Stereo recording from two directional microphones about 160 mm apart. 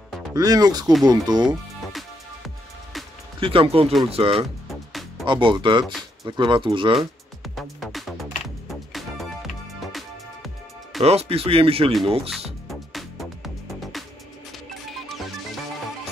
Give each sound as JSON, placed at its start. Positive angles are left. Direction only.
{"t": 0.3, "sound": "speech", "side_deg": -25}
{"t": 1.4, "sound": "music", "side_deg": 0}
{"t": 3.3, "sound": "speech", "side_deg": -35}
{"t": 4.6, "sound": "music", "side_deg": 0}
{"t": 5.2, "sound": "speech", "side_deg": -30}
{"t": 7.0, "sound": "music", "side_deg": 0}
{"t": 11.0, "sound": "speech", "side_deg": -40}
{"t": 12.6, "sound": "music", "side_deg": 0}
{"t": 14.5, "sound": "music", "side_deg": 0}